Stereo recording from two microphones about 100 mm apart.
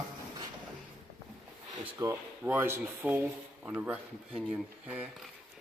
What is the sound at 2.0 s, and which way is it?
Speech, 35° right (ahead or behind).